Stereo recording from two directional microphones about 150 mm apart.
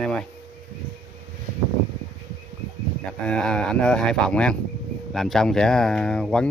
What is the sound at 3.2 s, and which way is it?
Speech, 5° left (ahead or behind).